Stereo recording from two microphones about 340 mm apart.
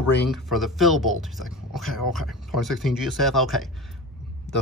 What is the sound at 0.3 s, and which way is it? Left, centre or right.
Speech, centre.